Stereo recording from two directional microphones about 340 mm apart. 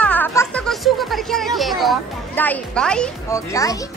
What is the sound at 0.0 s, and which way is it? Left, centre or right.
A woman's voice, centre.